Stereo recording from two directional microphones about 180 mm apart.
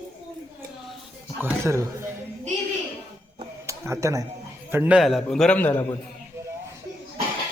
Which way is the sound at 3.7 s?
15° right (ahead or behind).